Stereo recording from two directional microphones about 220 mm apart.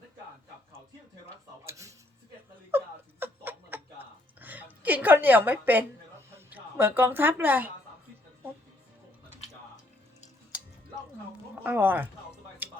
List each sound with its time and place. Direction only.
1.6 s a sound: 15° right (ahead or behind)
6.5 s a woman's voice: 10° right (ahead or behind)
11.6 s speech: 10° right (ahead or behind)